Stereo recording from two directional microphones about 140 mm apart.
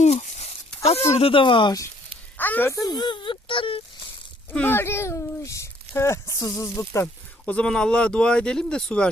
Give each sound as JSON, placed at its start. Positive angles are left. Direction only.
{"t": 0.0, "sound": "a sound", "side_deg": 50}
{"t": 0.8, "sound": "speech", "side_deg": 45}
{"t": 2.4, "sound": "speech", "side_deg": 15}
{"t": 4.5, "sound": "speech", "side_deg": 15}
{"t": 7.4, "sound": "speech", "side_deg": 10}